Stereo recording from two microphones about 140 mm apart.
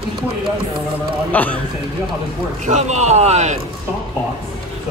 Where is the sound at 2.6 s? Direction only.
55° right (ahead or behind).